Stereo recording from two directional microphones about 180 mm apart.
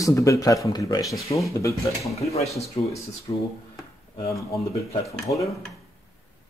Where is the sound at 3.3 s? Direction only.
25° left (ahead or behind).